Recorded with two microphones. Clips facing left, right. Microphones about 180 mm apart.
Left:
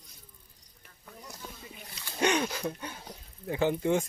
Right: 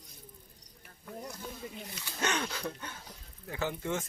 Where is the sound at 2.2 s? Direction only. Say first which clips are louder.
Left 6 dB; 15° left (ahead or behind).